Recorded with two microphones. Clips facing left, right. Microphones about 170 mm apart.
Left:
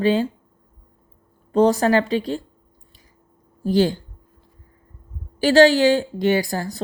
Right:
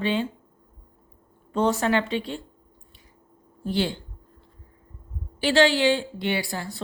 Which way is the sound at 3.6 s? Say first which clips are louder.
Left 8 dB; 40° left (ahead or behind).